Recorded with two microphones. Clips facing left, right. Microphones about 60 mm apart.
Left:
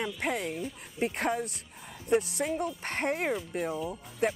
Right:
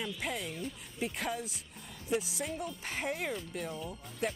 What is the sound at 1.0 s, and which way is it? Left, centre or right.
Speech, left.